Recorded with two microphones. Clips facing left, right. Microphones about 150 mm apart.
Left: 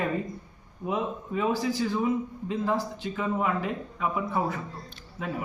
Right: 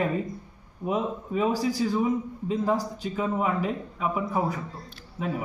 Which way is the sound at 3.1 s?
15° right (ahead or behind).